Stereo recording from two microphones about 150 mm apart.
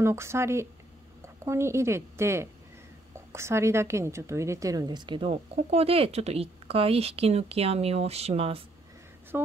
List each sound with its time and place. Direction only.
0.0 s a woman's voice: 15° right (ahead or behind); by 8.6 s 40° right (ahead or behind)
9.3 s speech: 15° right (ahead or behind)